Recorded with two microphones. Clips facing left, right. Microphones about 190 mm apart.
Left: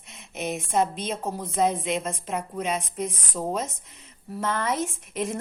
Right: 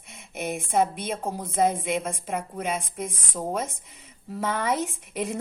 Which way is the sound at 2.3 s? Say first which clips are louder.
Left 1 dB; 55° right (ahead or behind).